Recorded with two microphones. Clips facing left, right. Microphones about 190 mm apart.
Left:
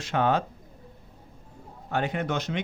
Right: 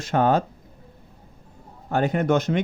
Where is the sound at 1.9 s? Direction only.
45° right (ahead or behind).